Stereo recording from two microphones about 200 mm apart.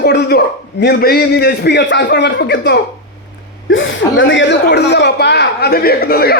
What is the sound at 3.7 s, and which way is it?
A man's voice, 70° left (ahead or behind).